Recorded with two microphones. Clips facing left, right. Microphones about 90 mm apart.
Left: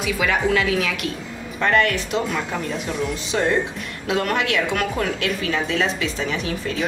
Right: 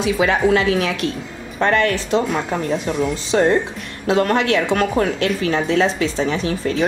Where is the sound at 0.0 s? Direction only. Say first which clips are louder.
Right 5 dB; 30° right (ahead or behind).